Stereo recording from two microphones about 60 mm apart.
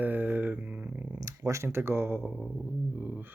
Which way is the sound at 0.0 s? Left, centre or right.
Right.